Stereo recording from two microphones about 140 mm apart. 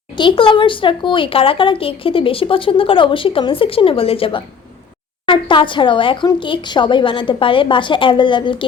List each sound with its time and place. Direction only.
0.2 s speech: 40° left (ahead or behind)